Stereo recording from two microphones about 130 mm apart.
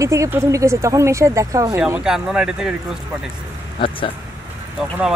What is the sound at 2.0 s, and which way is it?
Speech, 5° right (ahead or behind).